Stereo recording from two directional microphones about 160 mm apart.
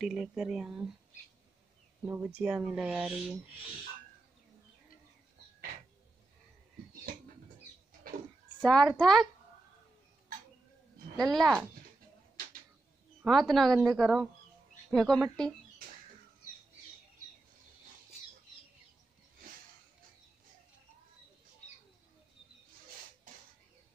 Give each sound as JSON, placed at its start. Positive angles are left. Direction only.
{"t": 0.0, "sound": "speech", "side_deg": -5}
{"t": 2.0, "sound": "speech", "side_deg": -15}
{"t": 7.1, "sound": "rodents", "side_deg": -60}
{"t": 8.0, "sound": "a sound", "side_deg": -65}
{"t": 8.5, "sound": "speech", "side_deg": 5}
{"t": 11.2, "sound": "speech", "side_deg": 0}
{"t": 13.2, "sound": "speech", "side_deg": 0}